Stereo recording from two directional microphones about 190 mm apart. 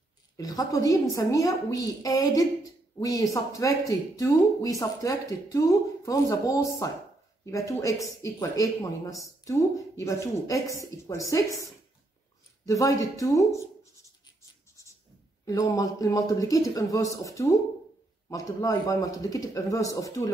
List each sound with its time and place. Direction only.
0.4 s a woman's voice: 20° left (ahead or behind)
12.6 s a woman's voice: 15° left (ahead or behind)
15.4 s a woman's voice: 20° left (ahead or behind)